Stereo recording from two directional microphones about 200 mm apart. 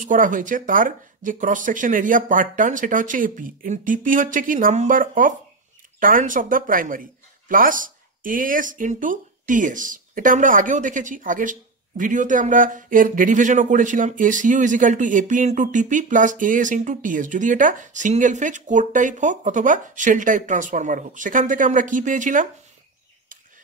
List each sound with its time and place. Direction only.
0.0 s speech: 40° right (ahead or behind)